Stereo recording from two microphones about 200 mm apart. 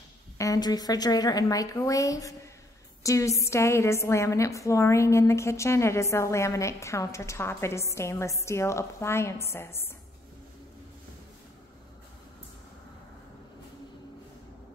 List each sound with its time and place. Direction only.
0.4 s a woman's voice: 20° left (ahead or behind)